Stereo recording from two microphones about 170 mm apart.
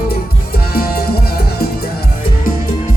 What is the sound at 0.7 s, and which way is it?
Music, 65° left (ahead or behind).